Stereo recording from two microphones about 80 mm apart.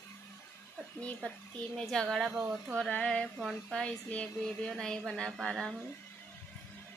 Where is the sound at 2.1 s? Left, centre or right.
Centre.